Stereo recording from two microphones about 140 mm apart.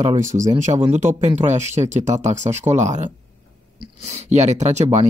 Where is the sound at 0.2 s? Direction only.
60° right (ahead or behind).